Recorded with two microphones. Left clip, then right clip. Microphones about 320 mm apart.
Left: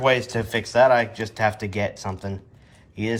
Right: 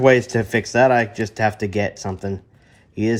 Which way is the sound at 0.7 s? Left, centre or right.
Centre.